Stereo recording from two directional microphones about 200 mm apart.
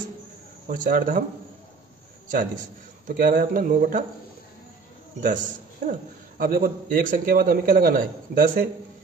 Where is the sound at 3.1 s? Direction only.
45° right (ahead or behind).